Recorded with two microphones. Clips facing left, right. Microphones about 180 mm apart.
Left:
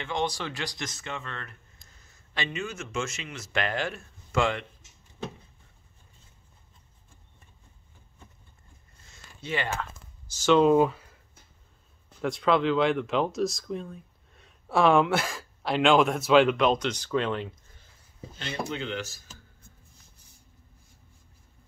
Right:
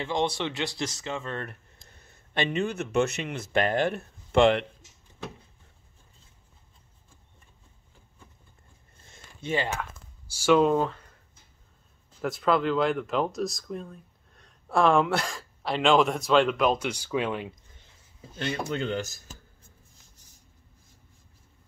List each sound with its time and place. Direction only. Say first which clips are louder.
0.0 s speech: right 3 dB; 25° right (ahead or behind)
1.5 s a sound: right 5 dB; 60° right (ahead or behind)
2.6 s speech: right 10 dB; 60° right (ahead or behind)
4.3 s speech: right 7 dB; 65° right (ahead or behind)
9.0 s a sound: right 2 dB; 50° right (ahead or behind)
9.8 s a sound: even; 10° right (ahead or behind)
10.7 s speech: left 4 dB; 10° left (ahead or behind)
12.2 s speech: left 1 dB; centre (ahead or behind)
18.4 s speech: right 3 dB; 45° right (ahead or behind)